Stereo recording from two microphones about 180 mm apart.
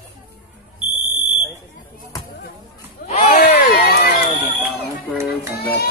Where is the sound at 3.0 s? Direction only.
45° left (ahead or behind); by 4.2 s 65° left (ahead or behind).